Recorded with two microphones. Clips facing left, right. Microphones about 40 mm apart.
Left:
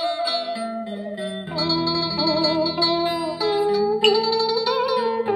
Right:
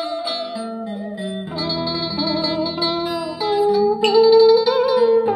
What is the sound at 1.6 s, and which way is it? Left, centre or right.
Music, centre.